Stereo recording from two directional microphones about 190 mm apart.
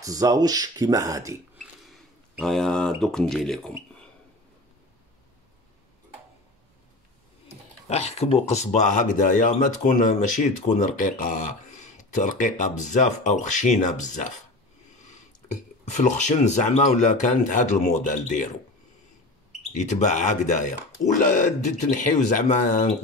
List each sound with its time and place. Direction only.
0.0 s speech: 20° right (ahead or behind)
1.9 s speech: centre (ahead or behind)
7.9 s speech: 35° left (ahead or behind)
15.8 s speech: 40° left (ahead or behind)
19.7 s speech: 40° left (ahead or behind)